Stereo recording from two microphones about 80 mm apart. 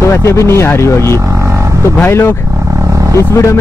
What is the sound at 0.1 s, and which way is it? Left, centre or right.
A man's voice, left.